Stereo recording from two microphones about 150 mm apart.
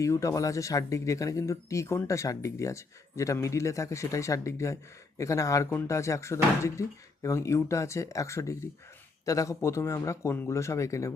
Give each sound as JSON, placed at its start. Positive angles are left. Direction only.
{"t": 0.0, "sound": "speech", "side_deg": 20}